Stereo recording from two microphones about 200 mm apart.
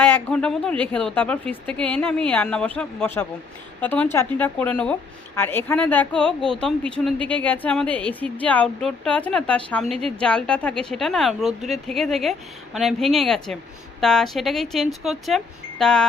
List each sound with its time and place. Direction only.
0.0 s a woman's voice: 10° left (ahead or behind)